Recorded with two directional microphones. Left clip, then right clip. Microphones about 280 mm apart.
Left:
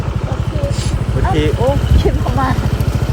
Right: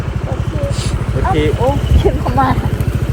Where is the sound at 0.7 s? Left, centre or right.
Centre.